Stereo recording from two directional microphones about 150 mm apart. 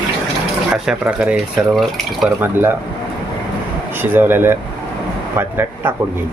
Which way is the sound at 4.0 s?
15° right (ahead or behind).